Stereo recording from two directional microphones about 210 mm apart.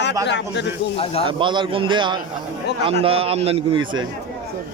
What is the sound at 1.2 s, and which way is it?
A man's voice, 20° right (ahead or behind).